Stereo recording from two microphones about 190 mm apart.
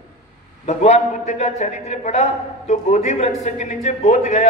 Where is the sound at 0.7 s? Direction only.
35° left (ahead or behind).